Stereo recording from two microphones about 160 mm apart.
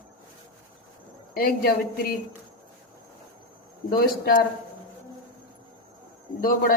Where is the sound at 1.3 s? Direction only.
65° left (ahead or behind).